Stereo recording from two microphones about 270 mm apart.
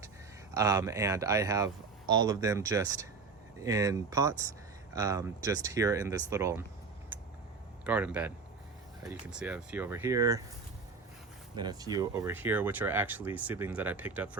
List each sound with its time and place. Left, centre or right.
0.5 s speech: centre
7.9 s speech: centre
11.5 s speech: centre